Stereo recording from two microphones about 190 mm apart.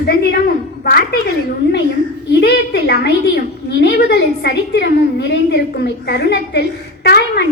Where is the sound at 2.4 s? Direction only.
60° left (ahead or behind).